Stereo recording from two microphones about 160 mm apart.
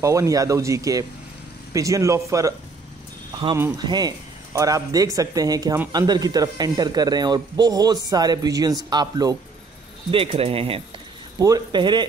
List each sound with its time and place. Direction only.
0.0 s speech: 20° right (ahead or behind)
3.7 s speech: 25° right (ahead or behind)
10.1 s speech: 35° right (ahead or behind)
11.3 s speech: 25° right (ahead or behind)